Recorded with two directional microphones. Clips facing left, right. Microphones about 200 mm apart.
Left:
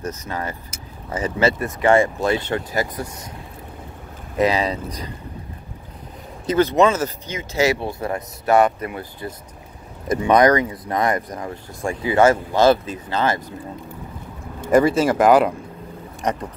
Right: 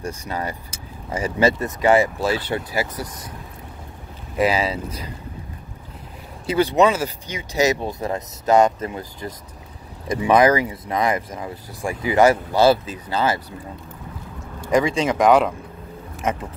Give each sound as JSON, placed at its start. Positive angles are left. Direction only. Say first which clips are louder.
{"t": 0.0, "sound": "speech", "louder": "even", "side_deg": -10}
{"t": 4.4, "sound": "speech", "louder": "left 1 dB", "side_deg": -5}
{"t": 6.4, "sound": "a man's voice", "louder": "left 1 dB", "side_deg": -10}
{"t": 10.0, "sound": "speech", "louder": "left 1 dB", "side_deg": -5}
{"t": 12.1, "sound": "speech", "louder": "even", "side_deg": -15}
{"t": 14.7, "sound": "speech", "louder": "left 3 dB", "side_deg": 5}